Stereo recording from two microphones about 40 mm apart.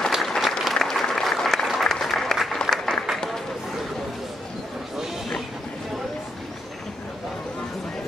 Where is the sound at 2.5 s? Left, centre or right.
Centre.